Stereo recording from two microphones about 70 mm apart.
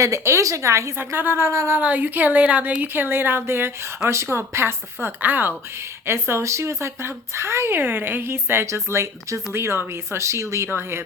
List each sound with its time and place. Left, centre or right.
0.0 s a woman's voice: right
1.5 s speech: right
1.8 s speech: right